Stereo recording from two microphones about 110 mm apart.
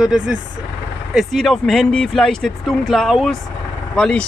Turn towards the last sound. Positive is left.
turn(degrees=10)  # may be behind; listen again after turning